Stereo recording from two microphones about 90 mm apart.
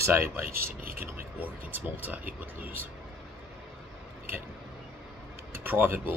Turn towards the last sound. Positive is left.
turn(degrees=-20)  # may be behind; listen again after turning